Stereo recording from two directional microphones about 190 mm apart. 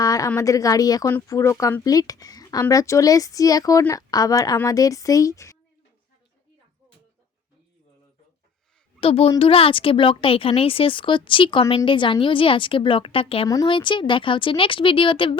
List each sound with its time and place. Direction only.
0.0 s speech: 15° left (ahead or behind)
9.0 s a woman's voice: 30° left (ahead or behind)